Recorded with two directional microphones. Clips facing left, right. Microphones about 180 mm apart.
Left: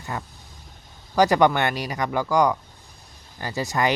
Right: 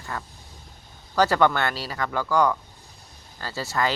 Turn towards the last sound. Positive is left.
turn(degrees=15)  # may be behind; listen again after turning